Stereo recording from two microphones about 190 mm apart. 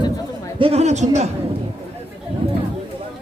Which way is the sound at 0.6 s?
35° right (ahead or behind).